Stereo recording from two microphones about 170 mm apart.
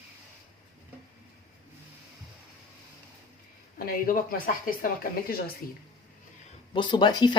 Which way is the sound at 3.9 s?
55° left (ahead or behind).